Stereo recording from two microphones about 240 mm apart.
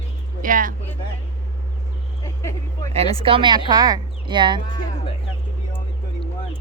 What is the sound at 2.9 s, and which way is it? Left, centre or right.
Speech, right.